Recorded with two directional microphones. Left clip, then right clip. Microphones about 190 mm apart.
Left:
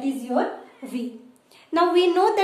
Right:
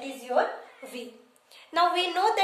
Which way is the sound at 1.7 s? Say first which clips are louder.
Left 5 dB; 10° left (ahead or behind).